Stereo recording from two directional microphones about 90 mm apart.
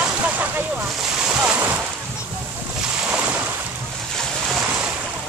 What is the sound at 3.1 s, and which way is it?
Boat, 15° right (ahead or behind).